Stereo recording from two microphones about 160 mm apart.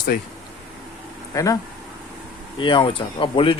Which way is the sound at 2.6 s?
30° left (ahead or behind).